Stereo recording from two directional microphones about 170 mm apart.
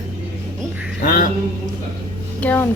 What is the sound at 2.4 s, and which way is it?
Speech, 10° left (ahead or behind).